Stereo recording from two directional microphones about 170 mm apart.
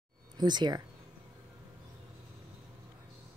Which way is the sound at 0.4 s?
25° right (ahead or behind).